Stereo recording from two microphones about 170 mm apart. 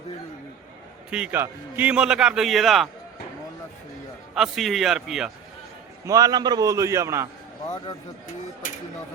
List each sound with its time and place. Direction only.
1.1 s a man's voice: 10° right (ahead or behind)
4.4 s a man's voice: centre (ahead or behind)
6.1 s a man's voice: 20° right (ahead or behind)
8.6 s a sound: 50° left (ahead or behind)